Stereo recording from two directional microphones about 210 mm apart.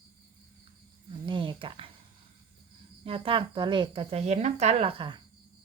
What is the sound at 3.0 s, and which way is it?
A woman's voice, 25° right (ahead or behind).